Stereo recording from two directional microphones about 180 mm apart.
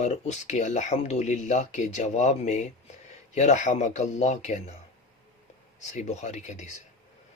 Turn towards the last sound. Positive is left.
turn(degrees=40)  # may be behind; listen again after turning